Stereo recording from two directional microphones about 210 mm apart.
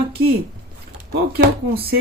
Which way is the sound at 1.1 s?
50° right (ahead or behind).